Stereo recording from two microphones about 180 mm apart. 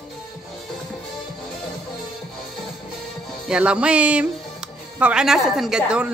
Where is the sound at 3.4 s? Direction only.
5° right (ahead or behind).